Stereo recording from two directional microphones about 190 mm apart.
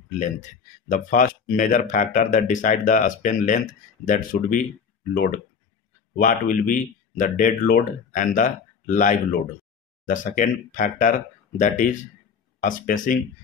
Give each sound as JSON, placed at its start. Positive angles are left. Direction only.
{"t": 0.8, "sound": "speech", "side_deg": 45}